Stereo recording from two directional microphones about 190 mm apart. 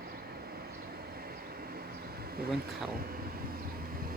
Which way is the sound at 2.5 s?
50° right (ahead or behind).